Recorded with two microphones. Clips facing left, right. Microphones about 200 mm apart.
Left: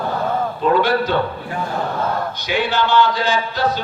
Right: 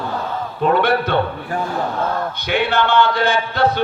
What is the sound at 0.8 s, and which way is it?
Speech, 60° right (ahead or behind).